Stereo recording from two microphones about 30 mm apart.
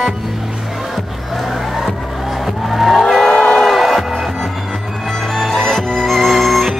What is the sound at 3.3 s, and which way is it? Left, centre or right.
Music, left.